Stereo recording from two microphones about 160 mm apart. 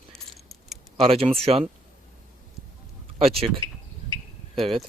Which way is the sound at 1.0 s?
35° right (ahead or behind).